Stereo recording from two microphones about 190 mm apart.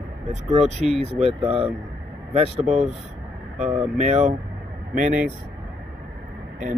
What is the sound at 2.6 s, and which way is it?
Speech, centre (ahead or behind).